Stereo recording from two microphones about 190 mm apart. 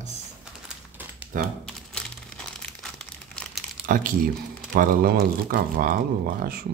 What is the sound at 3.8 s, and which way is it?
Speech, 45° right (ahead or behind).